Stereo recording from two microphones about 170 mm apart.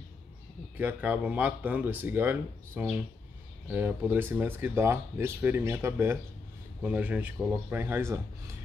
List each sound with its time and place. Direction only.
0.7 s speech: 10° right (ahead or behind)